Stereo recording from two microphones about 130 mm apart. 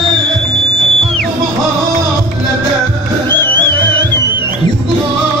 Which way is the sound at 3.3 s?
15° left (ahead or behind).